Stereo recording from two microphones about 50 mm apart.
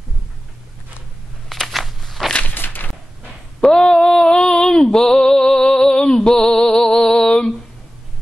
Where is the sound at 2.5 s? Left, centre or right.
Left.